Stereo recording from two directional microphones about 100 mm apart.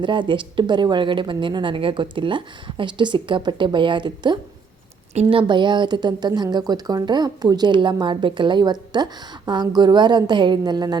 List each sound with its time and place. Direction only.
0.0 s speech: 55° right (ahead or behind)